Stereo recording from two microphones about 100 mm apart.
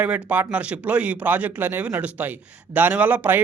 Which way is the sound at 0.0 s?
15° right (ahead or behind).